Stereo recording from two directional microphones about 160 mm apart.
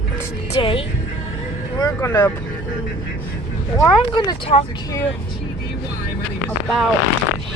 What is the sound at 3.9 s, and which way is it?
Speech, 25° left (ahead or behind).